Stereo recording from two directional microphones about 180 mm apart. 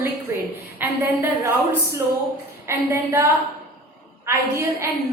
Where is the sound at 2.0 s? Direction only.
15° right (ahead or behind).